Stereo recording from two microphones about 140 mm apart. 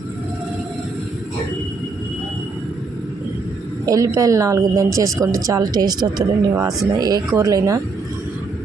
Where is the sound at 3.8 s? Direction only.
25° right (ahead or behind).